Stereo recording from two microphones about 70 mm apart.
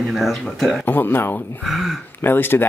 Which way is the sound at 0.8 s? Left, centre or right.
Left.